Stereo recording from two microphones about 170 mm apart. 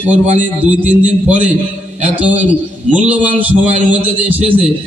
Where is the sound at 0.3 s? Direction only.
10° right (ahead or behind).